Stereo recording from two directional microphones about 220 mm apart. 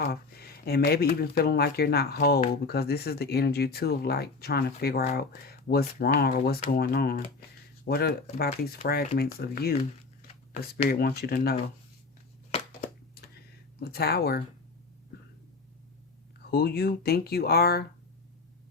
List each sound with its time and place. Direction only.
0.0 s speech: 45° left (ahead or behind)
12.5 s a sound: 25° left (ahead or behind)
13.7 s speech: 45° left (ahead or behind)
16.5 s speech: 45° left (ahead or behind)